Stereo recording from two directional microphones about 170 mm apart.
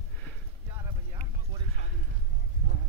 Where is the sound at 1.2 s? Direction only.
40° right (ahead or behind).